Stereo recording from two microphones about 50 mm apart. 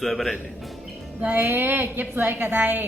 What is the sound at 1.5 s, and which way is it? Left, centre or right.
A woman's voice, right.